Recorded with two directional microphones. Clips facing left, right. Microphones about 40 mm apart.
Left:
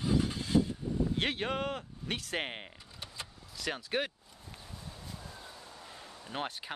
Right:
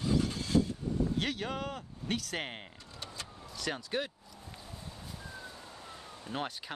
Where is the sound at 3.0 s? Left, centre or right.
Centre.